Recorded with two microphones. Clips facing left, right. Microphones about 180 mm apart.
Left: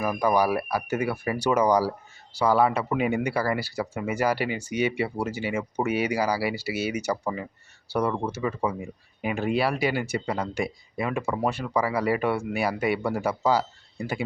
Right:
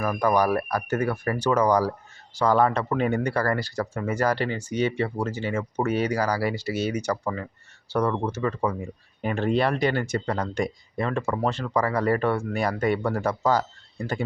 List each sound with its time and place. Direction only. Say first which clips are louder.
0.0 s speech: right 1 dB; 10° left (ahead or behind)